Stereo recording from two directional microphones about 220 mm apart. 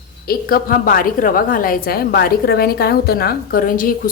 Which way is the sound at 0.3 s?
40° left (ahead or behind).